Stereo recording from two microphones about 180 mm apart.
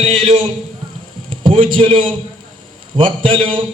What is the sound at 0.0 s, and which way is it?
Speech, 35° right (ahead or behind).